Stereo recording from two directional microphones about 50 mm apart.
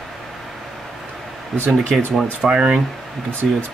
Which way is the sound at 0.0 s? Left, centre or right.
Centre.